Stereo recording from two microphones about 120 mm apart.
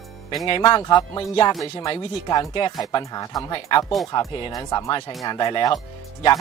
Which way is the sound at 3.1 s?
35° left (ahead or behind).